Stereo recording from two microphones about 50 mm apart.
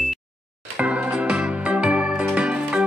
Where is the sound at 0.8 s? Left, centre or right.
Right.